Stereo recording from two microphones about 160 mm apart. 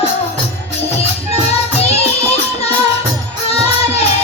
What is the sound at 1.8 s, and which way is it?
Music, 40° left (ahead or behind).